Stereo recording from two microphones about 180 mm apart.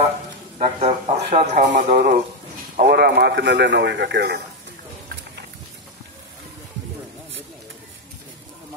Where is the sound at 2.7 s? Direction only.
60° right (ahead or behind).